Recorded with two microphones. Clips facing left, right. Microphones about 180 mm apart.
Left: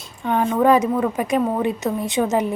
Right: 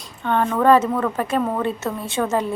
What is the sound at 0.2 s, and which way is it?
A woman's voice, 10° left (ahead or behind).